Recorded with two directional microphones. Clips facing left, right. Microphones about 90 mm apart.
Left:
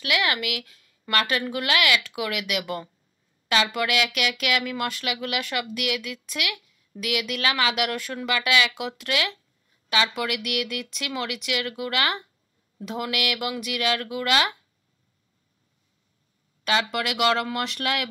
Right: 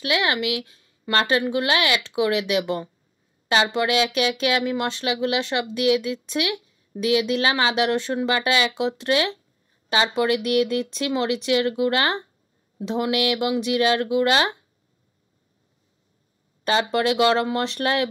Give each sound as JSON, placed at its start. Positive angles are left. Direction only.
{"t": 0.0, "sound": "speech", "side_deg": -30}
{"t": 16.6, "sound": "speech", "side_deg": -35}